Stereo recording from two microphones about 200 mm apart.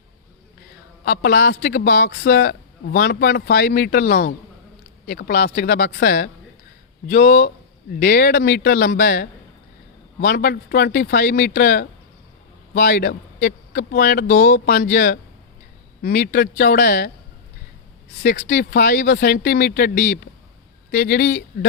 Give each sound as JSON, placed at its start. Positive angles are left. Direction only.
{"t": 1.0, "sound": "a man's voice", "side_deg": 55}
{"t": 18.2, "sound": "a man's voice", "side_deg": 55}